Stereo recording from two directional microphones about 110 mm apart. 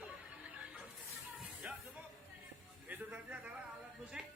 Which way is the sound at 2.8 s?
15° right (ahead or behind).